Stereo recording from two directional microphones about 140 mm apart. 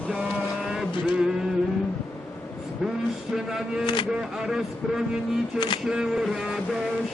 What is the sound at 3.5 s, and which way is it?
A man's voice, 5° right (ahead or behind).